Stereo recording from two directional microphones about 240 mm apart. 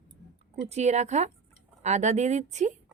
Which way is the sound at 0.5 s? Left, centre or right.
Right.